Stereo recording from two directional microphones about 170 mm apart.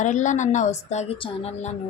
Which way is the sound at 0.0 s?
45° left (ahead or behind).